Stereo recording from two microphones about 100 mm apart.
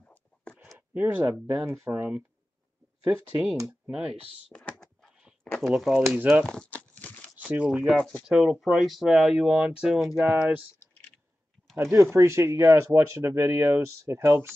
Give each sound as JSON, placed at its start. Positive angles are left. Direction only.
{"t": 0.0, "sound": "a sound", "side_deg": 10}
{"t": 0.7, "sound": "a sound", "side_deg": -15}
{"t": 1.5, "sound": "speech", "side_deg": -25}
{"t": 4.5, "sound": "speech", "side_deg": 10}
{"t": 6.1, "sound": "speech", "side_deg": -15}
{"t": 6.4, "sound": "crumpling", "side_deg": 5}
{"t": 7.4, "sound": "speech", "side_deg": -10}
{"t": 7.8, "sound": "speech", "side_deg": 5}
{"t": 10.3, "sound": "speech", "side_deg": -15}
{"t": 11.7, "sound": "speech", "side_deg": -30}